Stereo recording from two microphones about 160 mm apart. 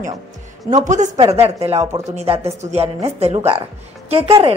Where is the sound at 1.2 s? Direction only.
40° right (ahead or behind).